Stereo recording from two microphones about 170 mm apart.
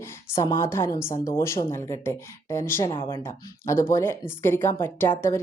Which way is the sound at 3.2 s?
15° left (ahead or behind).